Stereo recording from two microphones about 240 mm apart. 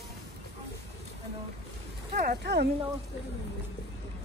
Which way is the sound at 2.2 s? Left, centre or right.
Right.